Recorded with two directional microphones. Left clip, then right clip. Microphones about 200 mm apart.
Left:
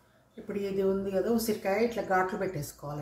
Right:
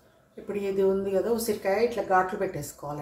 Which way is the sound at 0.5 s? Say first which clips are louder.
Right 4 dB; 15° right (ahead or behind).